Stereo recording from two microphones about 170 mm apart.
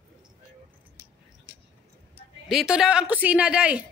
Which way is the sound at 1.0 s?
15° left (ahead or behind).